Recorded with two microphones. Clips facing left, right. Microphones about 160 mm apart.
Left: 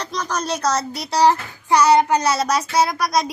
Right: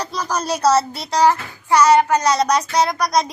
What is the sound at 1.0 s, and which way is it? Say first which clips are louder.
Child singing: even; 10° left (ahead or behind).